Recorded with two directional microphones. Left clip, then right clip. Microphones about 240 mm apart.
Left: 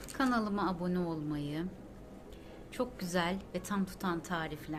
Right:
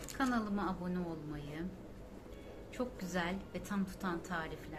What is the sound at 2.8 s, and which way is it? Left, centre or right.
A woman's voice, left.